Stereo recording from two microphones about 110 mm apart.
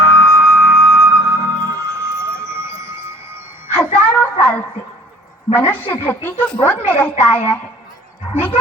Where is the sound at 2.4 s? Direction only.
25° right (ahead or behind).